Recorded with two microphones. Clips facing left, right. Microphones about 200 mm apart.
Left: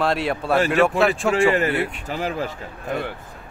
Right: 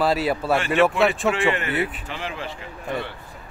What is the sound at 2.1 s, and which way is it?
Speech, 40° left (ahead or behind).